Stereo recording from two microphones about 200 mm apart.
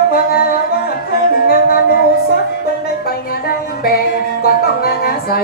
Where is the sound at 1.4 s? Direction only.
50° left (ahead or behind).